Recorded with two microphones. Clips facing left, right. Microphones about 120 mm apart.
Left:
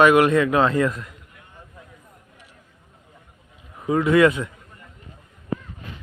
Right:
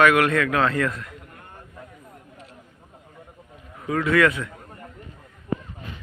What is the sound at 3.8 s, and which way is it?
Speech, 20° left (ahead or behind).